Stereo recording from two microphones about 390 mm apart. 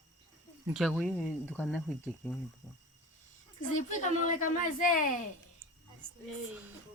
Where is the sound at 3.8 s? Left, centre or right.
Centre.